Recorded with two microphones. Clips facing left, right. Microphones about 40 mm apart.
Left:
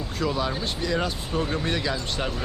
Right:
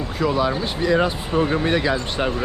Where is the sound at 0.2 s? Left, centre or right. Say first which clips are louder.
Right 6 dB; centre.